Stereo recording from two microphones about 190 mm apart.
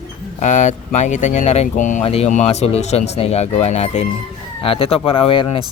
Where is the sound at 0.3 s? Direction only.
40° left (ahead or behind).